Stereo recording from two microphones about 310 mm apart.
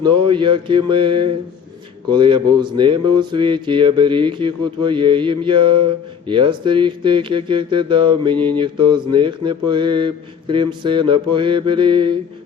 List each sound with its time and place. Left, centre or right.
0.0 s speech: centre